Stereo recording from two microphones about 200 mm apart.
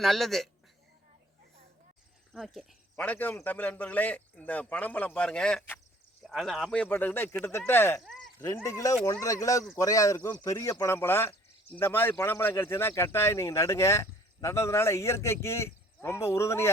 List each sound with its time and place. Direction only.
0.0 s speech: centre (ahead or behind)
2.3 s speech: centre (ahead or behind)